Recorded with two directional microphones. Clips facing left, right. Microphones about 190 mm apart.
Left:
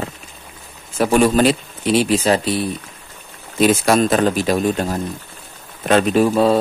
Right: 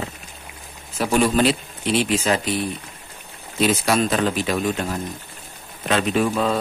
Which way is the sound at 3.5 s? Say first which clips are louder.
Left 5 dB; 45° left (ahead or behind).